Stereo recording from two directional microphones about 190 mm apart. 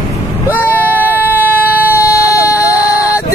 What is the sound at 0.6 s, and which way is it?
Vehicle, 10° left (ahead or behind).